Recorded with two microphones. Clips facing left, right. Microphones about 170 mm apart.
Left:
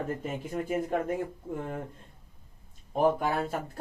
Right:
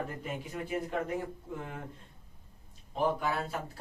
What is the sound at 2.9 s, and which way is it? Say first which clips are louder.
Speech: left 5 dB; 50° left (ahead or behind).